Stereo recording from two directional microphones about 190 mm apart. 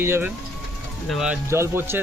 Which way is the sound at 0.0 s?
10° right (ahead or behind).